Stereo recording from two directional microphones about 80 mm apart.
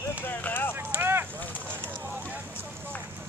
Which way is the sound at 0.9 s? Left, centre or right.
Right.